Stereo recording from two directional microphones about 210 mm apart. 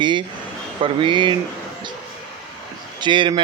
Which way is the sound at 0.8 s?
25° right (ahead or behind).